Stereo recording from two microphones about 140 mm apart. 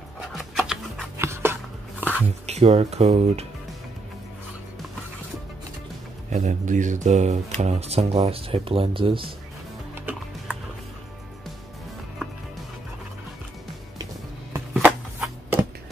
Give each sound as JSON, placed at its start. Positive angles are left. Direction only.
{"t": 0.6, "sound": "a sound", "side_deg": 0}
{"t": 1.1, "sound": "a sound", "side_deg": -20}
{"t": 2.4, "sound": "speech", "side_deg": -50}
{"t": 6.3, "sound": "speech", "side_deg": -60}
{"t": 9.9, "sound": "music", "side_deg": -10}
{"t": 14.7, "sound": "shuffling cards", "side_deg": -10}